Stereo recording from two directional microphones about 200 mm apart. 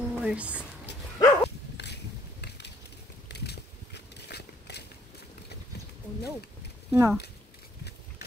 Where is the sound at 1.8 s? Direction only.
60° left (ahead or behind).